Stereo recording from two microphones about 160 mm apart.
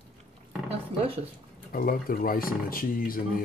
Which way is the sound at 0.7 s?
35° right (ahead or behind).